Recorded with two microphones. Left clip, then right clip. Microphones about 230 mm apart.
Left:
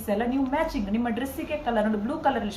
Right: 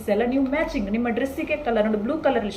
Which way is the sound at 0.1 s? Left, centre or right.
Centre.